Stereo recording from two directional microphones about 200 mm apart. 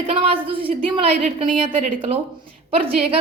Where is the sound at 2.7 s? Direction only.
30° right (ahead or behind).